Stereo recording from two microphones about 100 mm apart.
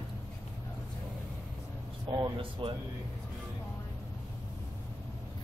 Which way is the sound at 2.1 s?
55° right (ahead or behind).